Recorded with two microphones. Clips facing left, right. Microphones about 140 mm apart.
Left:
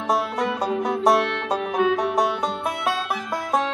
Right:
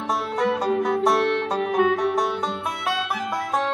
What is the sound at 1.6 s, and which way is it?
Music, 50° right (ahead or behind).